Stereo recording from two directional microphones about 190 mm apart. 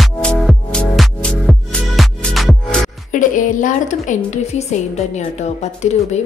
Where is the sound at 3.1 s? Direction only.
45° left (ahead or behind).